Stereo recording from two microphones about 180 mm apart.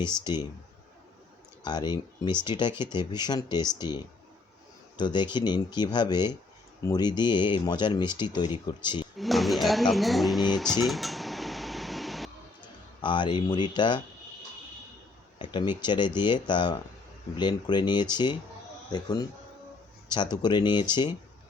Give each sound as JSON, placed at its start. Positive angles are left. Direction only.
{"t": 1.6, "sound": "speech", "side_deg": 25}
{"t": 9.1, "sound": "speech", "side_deg": 0}
{"t": 13.0, "sound": "speech", "side_deg": 25}
{"t": 15.4, "sound": "speech", "side_deg": 25}